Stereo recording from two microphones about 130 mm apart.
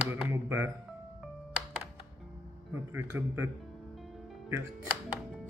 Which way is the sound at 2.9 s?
15° right (ahead or behind).